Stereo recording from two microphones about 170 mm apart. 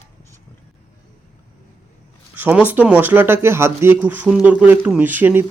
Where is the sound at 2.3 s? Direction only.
10° right (ahead or behind).